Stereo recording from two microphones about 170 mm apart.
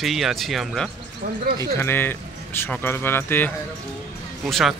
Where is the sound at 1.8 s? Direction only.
15° left (ahead or behind).